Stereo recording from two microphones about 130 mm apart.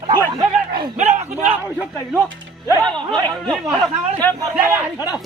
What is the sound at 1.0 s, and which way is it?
Speech, 60° right (ahead or behind).